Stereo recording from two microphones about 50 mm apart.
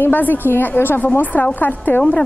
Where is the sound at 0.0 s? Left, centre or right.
Left.